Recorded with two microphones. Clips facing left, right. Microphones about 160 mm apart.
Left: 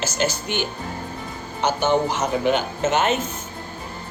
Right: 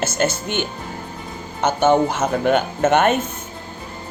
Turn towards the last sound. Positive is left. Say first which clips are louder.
# right 4 dB
turn(degrees=-55)  # may be behind; listen again after turning